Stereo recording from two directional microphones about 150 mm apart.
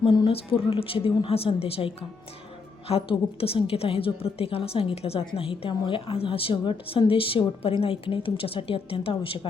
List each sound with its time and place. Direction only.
0.0 s a woman's voice: 35° left (ahead or behind)